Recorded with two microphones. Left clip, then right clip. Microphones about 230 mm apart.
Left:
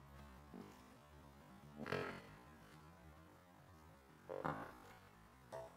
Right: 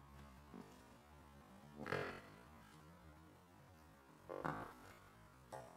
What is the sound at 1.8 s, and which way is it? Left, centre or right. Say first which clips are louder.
Music: even; centre.